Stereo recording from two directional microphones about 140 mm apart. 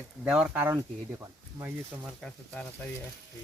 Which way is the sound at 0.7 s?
25° right (ahead or behind).